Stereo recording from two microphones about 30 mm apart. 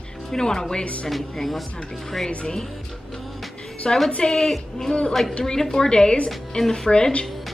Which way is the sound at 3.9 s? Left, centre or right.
Centre.